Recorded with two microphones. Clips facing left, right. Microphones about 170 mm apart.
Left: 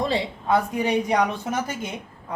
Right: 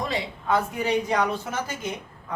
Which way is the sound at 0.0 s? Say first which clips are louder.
Left 4 dB; 30° left (ahead or behind).